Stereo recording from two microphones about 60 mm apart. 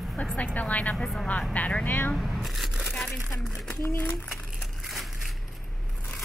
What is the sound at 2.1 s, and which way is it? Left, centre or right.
Speech, centre.